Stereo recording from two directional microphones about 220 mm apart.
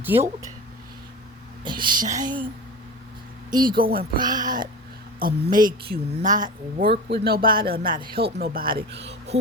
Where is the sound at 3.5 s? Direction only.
20° right (ahead or behind).